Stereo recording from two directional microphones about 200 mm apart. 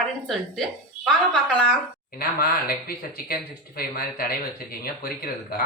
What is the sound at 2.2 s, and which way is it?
Speech, 50° left (ahead or behind).